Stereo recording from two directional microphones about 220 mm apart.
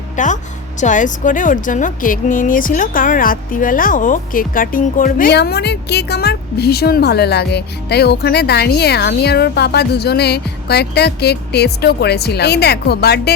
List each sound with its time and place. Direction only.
0.2 s a woman's voice: 35° left (ahead or behind)